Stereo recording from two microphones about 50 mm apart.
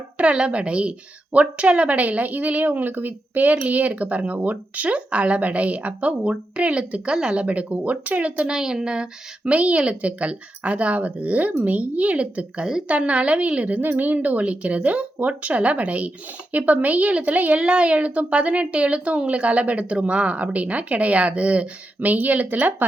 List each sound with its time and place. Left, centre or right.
0.3 s a woman's voice: right
7.4 s a woman's voice: right
8.4 s a woman's voice: centre; by 17.6 s right
17.6 s a woman's voice: right